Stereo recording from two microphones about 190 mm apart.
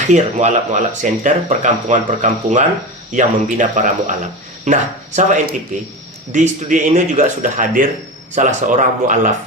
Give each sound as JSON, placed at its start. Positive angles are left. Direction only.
{"t": 0.1, "sound": "speech", "side_deg": -40}